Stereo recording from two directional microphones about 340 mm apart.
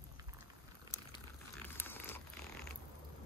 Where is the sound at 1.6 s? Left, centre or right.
Centre.